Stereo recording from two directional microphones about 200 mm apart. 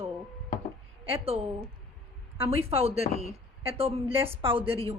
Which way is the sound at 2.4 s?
30° right (ahead or behind).